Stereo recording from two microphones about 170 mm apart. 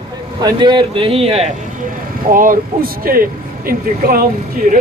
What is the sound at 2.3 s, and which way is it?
Speech, 55° right (ahead or behind).